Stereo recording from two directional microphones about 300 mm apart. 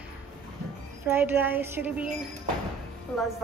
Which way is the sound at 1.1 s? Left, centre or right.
Centre.